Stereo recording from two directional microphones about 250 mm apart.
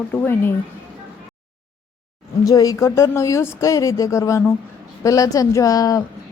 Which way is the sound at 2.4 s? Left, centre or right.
Centre.